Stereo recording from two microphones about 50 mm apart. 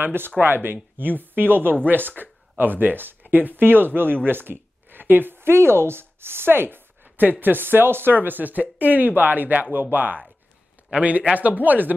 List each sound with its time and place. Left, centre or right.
0.0 s speech: right